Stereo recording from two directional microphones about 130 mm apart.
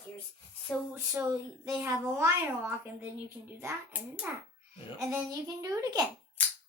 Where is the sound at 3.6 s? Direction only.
15° right (ahead or behind).